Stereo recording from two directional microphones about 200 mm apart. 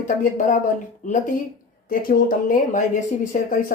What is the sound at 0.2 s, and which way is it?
Speech, 40° left (ahead or behind).